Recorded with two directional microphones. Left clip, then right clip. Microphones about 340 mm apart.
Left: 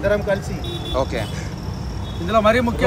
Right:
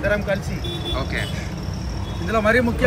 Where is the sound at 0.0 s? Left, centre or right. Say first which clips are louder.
Left 2 dB; left.